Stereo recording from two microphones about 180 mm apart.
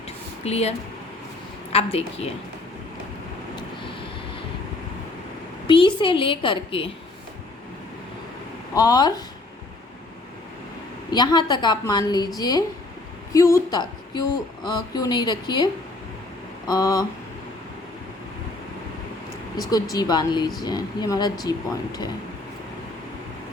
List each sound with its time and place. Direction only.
0.4 s a woman's voice: 35° left (ahead or behind)
1.7 s a woman's voice: 35° left (ahead or behind)
5.6 s a woman's voice: 30° left (ahead or behind)
8.7 s a woman's voice: 20° left (ahead or behind)
11.1 s a woman's voice: 25° left (ahead or behind)
19.7 s a woman's voice: 20° left (ahead or behind)